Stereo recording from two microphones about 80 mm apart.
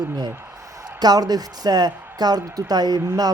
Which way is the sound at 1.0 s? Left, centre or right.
Right.